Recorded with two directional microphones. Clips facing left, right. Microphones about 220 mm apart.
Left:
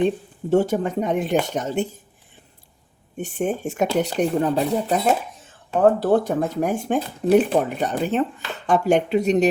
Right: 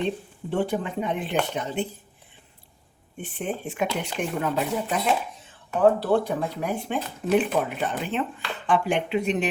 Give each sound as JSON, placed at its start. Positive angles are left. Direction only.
{"t": 0.5, "sound": "speech", "side_deg": 45}
{"t": 3.2, "sound": "speech", "side_deg": 45}